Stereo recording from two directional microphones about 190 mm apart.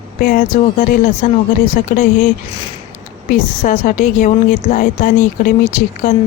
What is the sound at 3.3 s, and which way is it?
A woman's voice, 45° left (ahead or behind).